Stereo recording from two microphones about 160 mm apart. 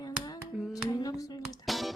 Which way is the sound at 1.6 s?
Centre (ahead or behind).